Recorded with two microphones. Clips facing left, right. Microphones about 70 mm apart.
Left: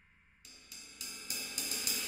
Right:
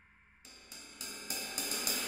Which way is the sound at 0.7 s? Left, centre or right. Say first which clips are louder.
Right 3 dB; right.